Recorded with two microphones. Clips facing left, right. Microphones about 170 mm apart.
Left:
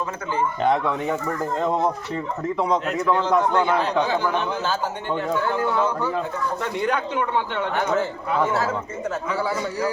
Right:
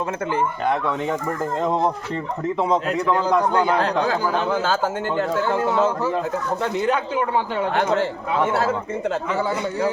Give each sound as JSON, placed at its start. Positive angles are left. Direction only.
{"t": 0.7, "sound": "speech", "side_deg": 10}
{"t": 2.6, "sound": "a man's voice", "side_deg": 0}
{"t": 4.4, "sound": "speech", "side_deg": -90}
{"t": 5.5, "sound": "speech", "side_deg": -25}